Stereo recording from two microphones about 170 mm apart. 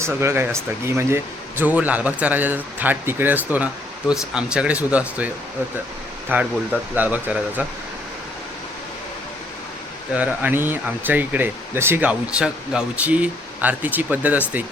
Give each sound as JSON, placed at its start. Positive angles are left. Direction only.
{"t": 0.0, "sound": "speech", "side_deg": -15}
{"t": 10.1, "sound": "speech", "side_deg": -10}